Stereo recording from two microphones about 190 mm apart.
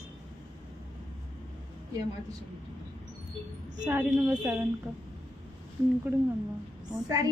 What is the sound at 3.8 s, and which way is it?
Speech, 10° right (ahead or behind).